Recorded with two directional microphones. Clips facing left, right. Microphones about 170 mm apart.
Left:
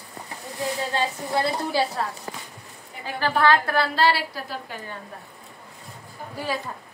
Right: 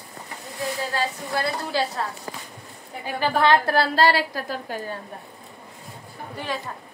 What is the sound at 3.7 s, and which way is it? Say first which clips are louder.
A woman's voice: right 2 dB; 40° right (ahead or behind).